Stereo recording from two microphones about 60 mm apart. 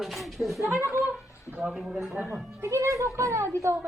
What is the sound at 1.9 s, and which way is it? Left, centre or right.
Speech, centre.